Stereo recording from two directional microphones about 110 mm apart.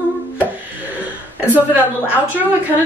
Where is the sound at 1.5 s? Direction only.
15° right (ahead or behind).